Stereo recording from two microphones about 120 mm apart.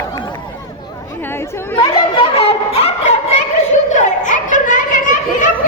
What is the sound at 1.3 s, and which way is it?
Chatter, 20° left (ahead or behind).